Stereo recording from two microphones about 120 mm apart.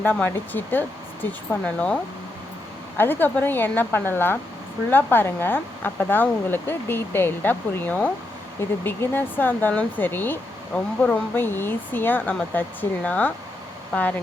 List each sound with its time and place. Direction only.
0.0 s speech: 15° left (ahead or behind)
3.0 s speech: 15° left (ahead or behind)